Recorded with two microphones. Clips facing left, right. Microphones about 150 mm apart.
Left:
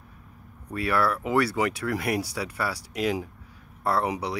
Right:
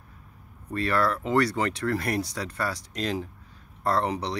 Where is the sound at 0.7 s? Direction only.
5° left (ahead or behind).